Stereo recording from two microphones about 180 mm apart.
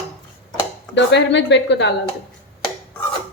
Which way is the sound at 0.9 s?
80° left.